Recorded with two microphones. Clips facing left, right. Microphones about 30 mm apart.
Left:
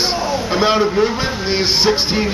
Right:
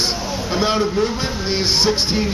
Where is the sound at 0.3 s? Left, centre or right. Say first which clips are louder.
Left 5 dB; centre.